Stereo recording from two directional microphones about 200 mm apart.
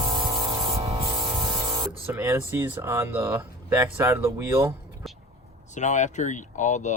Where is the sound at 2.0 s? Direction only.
10° right (ahead or behind).